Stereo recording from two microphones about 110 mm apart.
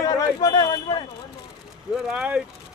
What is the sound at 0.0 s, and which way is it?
Speech, 35° left (ahead or behind).